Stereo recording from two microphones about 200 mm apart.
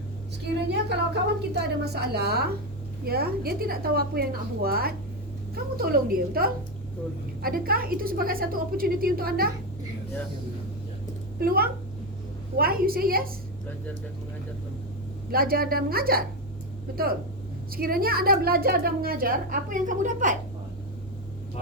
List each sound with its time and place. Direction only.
0.7 s a woman's voice: 55° right (ahead or behind)
11.3 s a woman's voice: 50° right (ahead or behind)
15.3 s a woman's voice: 50° right (ahead or behind)